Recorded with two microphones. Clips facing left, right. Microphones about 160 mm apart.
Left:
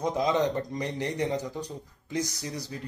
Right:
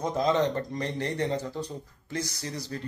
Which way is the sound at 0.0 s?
15° left (ahead or behind).